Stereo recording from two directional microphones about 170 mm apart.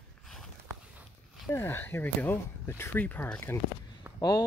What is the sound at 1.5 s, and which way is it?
Speech, 15° left (ahead or behind).